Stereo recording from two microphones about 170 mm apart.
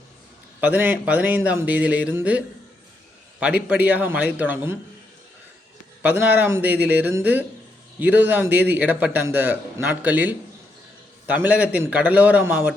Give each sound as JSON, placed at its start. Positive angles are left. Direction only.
{"t": 0.6, "sound": "a man's voice", "side_deg": -10}
{"t": 3.4, "sound": "a man's voice", "side_deg": -5}
{"t": 6.0, "sound": "a man's voice", "side_deg": -10}